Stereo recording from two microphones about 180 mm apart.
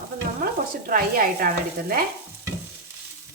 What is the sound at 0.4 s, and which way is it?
Stir, 50° right (ahead or behind).